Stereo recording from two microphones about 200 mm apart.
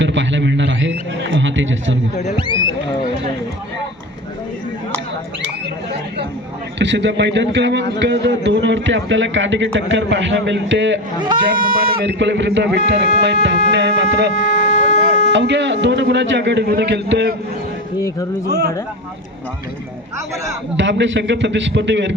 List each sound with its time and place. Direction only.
0.0 s a sound: 65° right (ahead or behind)
6.7 s a man's voice: 60° right (ahead or behind)
11.6 s a man's voice: 50° right (ahead or behind)
14.3 s music: 40° left (ahead or behind)
15.3 s a man's voice: 65° right (ahead or behind)
18.4 s speech: 55° right (ahead or behind)
20.7 s a man's voice: 65° right (ahead or behind)